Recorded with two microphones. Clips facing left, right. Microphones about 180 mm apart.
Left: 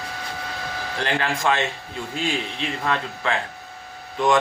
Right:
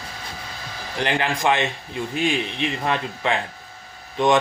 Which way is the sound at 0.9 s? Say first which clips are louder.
Right 2 dB; 15° right (ahead or behind).